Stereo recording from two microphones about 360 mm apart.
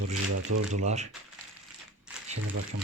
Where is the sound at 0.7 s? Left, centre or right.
Centre.